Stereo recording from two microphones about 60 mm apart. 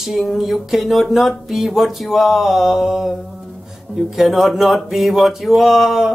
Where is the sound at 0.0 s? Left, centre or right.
Centre.